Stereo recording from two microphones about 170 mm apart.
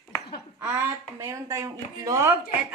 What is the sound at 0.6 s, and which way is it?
A woman's voice, 15° right (ahead or behind).